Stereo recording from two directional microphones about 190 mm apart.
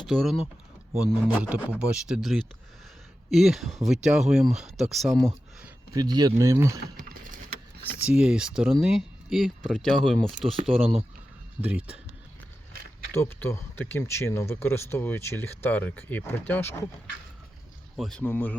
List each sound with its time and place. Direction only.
0.1 s speech: centre (ahead or behind)
5.9 s speech: 20° right (ahead or behind)
6.9 s typing: 45° right (ahead or behind)
8.0 s speech: 5° right (ahead or behind)
11.6 s speech: 5° right (ahead or behind)
13.1 s speech: 15° left (ahead or behind)
17.9 s speech: centre (ahead or behind)